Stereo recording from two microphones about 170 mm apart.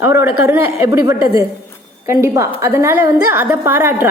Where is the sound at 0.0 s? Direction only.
15° right (ahead or behind).